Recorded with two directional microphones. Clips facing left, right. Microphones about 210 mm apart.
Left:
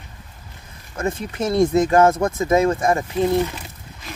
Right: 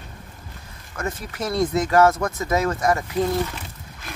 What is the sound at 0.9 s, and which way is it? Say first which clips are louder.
Speech: left 5 dB; 25° left (ahead or behind).